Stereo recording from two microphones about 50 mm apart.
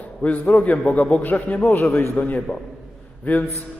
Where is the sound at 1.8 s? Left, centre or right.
Left.